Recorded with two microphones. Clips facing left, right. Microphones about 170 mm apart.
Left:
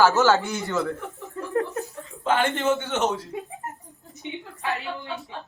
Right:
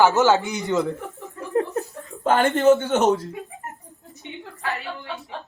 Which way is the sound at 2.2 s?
45° right (ahead or behind).